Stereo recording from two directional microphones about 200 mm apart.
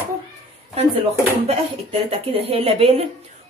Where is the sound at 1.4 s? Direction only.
30° right (ahead or behind).